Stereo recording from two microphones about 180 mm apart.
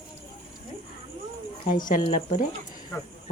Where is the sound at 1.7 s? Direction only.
50° left (ahead or behind).